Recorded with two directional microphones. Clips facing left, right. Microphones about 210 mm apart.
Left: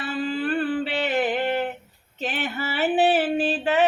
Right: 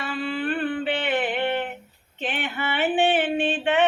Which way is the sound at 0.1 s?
40° left (ahead or behind).